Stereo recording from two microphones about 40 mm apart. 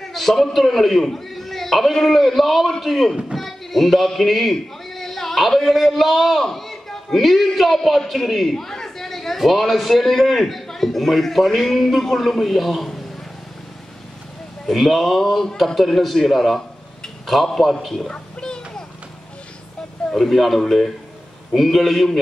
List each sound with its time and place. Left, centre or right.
0.0 s a man's voice: centre
14.7 s a man's voice: centre
18.1 s a sound: centre
20.2 s a man's voice: centre